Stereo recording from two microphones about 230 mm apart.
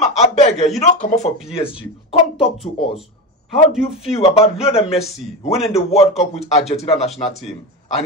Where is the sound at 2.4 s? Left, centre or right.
Centre.